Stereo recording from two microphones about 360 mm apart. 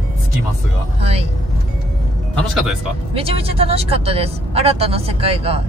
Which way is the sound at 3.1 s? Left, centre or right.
Centre.